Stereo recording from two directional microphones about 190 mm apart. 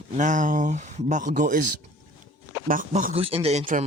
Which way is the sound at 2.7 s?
45° right (ahead or behind).